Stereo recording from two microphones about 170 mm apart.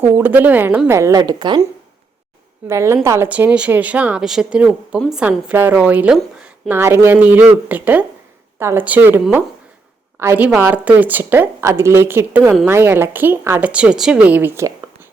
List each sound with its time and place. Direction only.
0.2 s speech: 10° right (ahead or behind); by 1.6 s 25° right (ahead or behind)
2.6 s speech: 15° right (ahead or behind)